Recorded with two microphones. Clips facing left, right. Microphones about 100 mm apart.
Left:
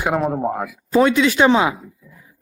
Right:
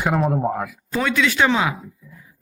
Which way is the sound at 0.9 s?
25° left (ahead or behind).